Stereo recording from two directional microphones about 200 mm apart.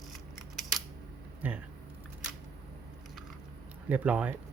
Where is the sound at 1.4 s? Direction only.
10° right (ahead or behind).